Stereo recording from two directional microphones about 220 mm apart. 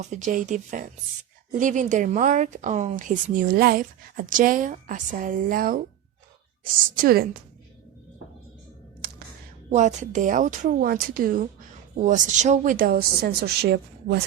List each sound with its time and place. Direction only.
0.0 s a woman's voice: 35° right (ahead or behind)
6.9 s a woman's voice: 40° right (ahead or behind)
9.7 s a woman's voice: 35° right (ahead or behind)